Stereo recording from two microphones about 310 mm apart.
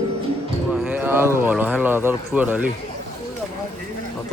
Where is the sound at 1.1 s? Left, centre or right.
Centre.